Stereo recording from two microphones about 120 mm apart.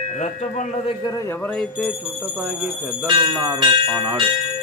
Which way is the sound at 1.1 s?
30° left (ahead or behind).